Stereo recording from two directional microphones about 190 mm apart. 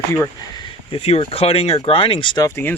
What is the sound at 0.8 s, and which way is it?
Speech, 30° left (ahead or behind).